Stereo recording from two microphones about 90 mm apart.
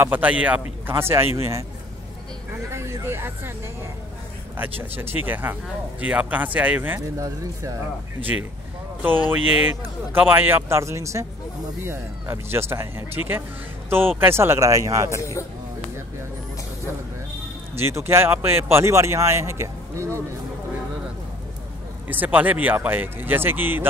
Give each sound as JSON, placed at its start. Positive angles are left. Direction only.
{"t": 0.0, "sound": "speech", "side_deg": -20}
{"t": 2.7, "sound": "vehicle", "side_deg": -30}
{"t": 4.6, "sound": "speech", "side_deg": -20}
{"t": 7.2, "sound": "speech", "side_deg": -35}
{"t": 9.3, "sound": "speech", "side_deg": -20}
{"t": 17.7, "sound": "speech", "side_deg": -30}
{"t": 22.0, "sound": "speech", "side_deg": -20}